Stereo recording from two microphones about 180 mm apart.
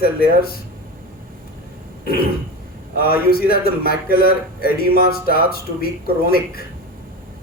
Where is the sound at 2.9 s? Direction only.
60° left (ahead or behind).